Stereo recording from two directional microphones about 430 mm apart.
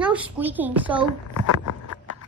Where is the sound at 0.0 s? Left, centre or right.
Centre.